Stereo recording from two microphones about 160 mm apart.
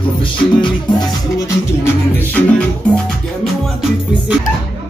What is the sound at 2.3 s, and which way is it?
Music, 5° left (ahead or behind).